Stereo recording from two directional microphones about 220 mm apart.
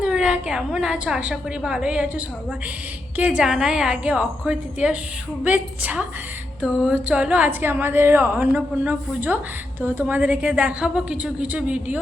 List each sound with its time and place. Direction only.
0.0 s a woman's voice: 5° right (ahead or behind)